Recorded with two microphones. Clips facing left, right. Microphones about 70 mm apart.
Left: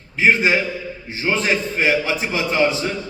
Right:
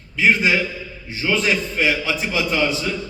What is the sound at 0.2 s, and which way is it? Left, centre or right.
A man's voice, left.